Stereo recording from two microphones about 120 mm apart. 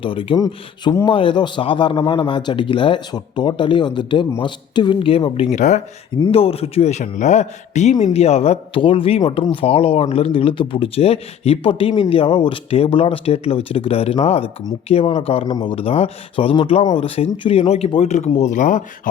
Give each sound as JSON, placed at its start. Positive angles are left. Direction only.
{"t": 0.0, "sound": "speech", "side_deg": 45}
{"t": 0.3, "sound": "speech", "side_deg": 30}
{"t": 1.0, "sound": "speech", "side_deg": 45}
{"t": 5.5, "sound": "speech", "side_deg": 85}
{"t": 6.3, "sound": "a man's voice", "side_deg": 55}